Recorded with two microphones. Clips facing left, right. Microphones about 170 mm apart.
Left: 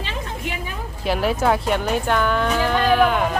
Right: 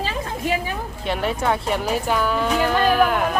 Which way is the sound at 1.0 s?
5° left (ahead or behind).